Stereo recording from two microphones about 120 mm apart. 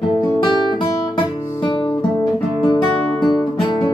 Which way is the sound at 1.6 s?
35° left (ahead or behind).